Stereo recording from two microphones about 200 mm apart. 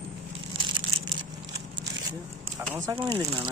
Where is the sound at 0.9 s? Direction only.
90° right.